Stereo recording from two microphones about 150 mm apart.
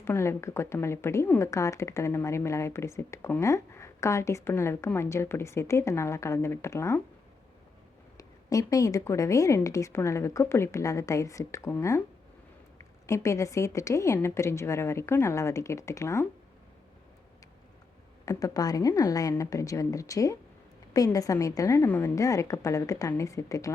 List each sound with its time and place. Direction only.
0.0 s speech: 15° left (ahead or behind)
8.2 s speech: 25° left (ahead or behind)
13.1 s speech: 20° left (ahead or behind)
18.3 s speech: 25° left (ahead or behind)